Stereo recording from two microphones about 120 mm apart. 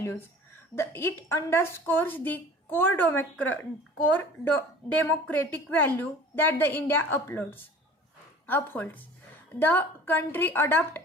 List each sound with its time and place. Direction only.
0.0 s a woman's voice: 20° left (ahead or behind)